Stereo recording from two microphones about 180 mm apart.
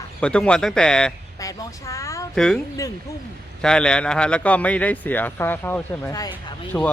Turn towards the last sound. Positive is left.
turn(degrees=15)  # may be behind; listen again after turning